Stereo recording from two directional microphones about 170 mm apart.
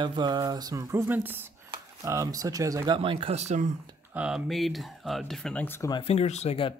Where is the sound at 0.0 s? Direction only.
25° right (ahead or behind).